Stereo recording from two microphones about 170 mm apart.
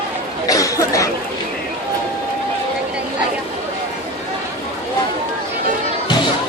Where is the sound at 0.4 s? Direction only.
20° left (ahead or behind).